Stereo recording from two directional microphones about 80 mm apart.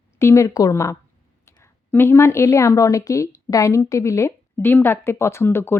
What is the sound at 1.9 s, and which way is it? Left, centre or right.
A woman's voice, left.